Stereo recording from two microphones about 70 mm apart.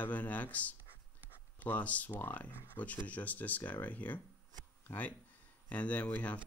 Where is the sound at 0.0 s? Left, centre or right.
Left.